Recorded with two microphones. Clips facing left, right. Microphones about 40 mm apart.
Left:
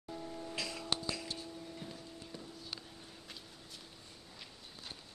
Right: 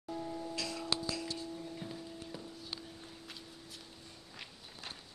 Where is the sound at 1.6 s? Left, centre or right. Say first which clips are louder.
Right 3 dB; centre.